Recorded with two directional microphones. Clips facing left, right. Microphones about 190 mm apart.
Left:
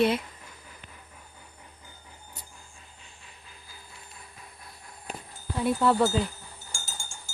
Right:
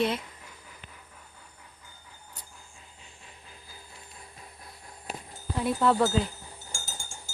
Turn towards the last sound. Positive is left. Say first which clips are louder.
# even
turn(degrees=-20)  # may be behind; listen again after turning